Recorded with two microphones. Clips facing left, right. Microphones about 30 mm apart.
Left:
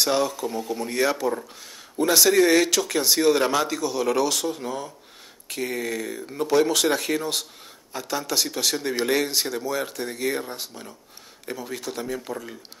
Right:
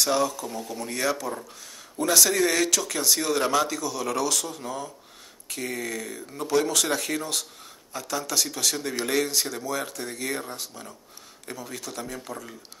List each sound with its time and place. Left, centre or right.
0.0 s speech: centre